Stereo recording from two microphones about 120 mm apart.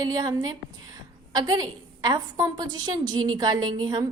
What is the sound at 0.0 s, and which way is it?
A woman's voice, 35° right (ahead or behind).